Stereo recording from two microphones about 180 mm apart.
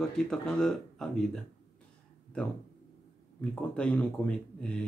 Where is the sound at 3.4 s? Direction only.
5° left (ahead or behind).